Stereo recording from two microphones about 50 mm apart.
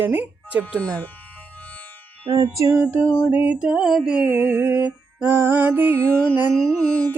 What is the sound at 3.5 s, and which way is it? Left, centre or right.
Mantra, centre.